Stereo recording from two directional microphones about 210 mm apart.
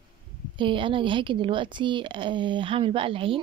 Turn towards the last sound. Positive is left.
turn(degrees=-25)  # may be behind; listen again after turning